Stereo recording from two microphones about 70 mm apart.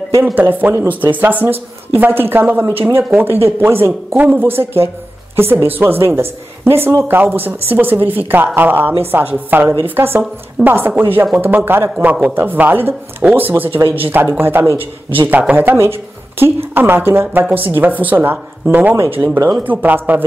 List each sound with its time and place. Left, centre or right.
0.2 s a woman's voice: right